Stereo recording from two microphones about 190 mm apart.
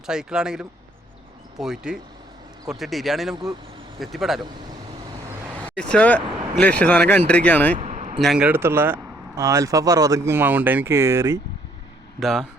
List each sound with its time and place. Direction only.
0.0 s speech: 5° right (ahead or behind)
5.6 s speech: 5° left (ahead or behind)
7.8 s a sound: 35° right (ahead or behind)
8.2 s speech: 5° right (ahead or behind)
12.2 s speech: centre (ahead or behind)